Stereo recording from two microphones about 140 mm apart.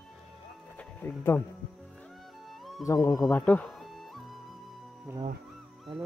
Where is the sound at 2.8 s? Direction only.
25° left (ahead or behind).